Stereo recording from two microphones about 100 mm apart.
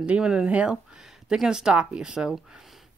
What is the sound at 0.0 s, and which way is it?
Speech, 10° right (ahead or behind).